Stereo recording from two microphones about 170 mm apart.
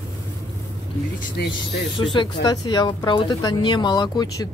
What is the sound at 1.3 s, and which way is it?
Speech, 85° left.